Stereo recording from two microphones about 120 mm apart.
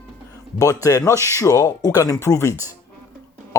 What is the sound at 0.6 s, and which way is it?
Speech, 25° left (ahead or behind).